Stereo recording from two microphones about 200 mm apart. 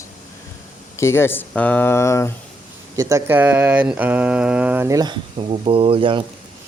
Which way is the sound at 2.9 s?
15° right (ahead or behind).